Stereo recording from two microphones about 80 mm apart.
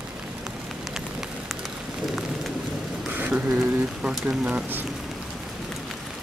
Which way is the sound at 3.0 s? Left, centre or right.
Centre.